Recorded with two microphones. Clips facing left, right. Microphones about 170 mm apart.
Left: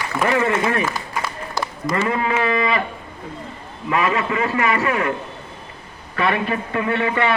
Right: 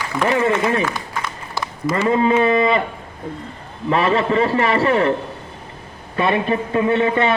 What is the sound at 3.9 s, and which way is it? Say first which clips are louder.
A man's voice: right 3 dB; 30° right (ahead or behind).